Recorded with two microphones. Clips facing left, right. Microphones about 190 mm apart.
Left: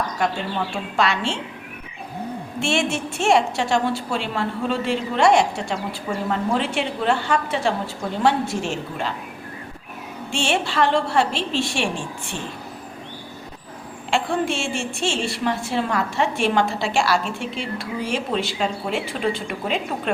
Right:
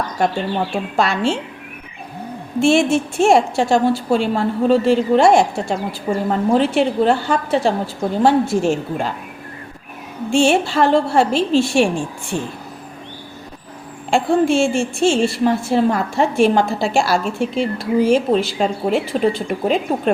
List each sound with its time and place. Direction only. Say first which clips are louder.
0.2 s speech: right 7 dB; 60° right (ahead or behind)
0.9 s a woman's voice: right 4 dB; 40° right (ahead or behind)
2.6 s a woman's voice: right 9 dB; 40° right (ahead or behind)
10.5 s a woman's voice: right 5 dB; 40° right (ahead or behind)
14.1 s a woman's voice: right 7 dB; 45° right (ahead or behind)